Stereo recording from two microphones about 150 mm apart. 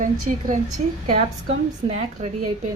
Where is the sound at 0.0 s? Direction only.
60° right (ahead or behind).